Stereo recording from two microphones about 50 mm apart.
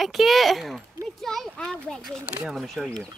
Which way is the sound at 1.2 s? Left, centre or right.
Centre.